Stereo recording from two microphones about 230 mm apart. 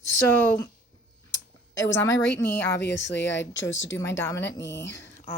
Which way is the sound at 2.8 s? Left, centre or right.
Left.